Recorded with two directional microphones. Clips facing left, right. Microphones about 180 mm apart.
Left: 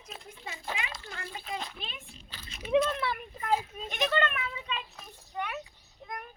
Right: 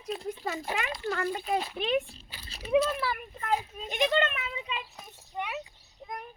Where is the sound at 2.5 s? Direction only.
35° right (ahead or behind).